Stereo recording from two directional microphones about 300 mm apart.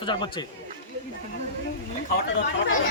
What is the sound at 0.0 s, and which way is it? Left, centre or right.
Speech, centre.